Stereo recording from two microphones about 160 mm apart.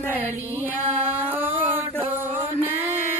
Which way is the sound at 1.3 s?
10° right (ahead or behind).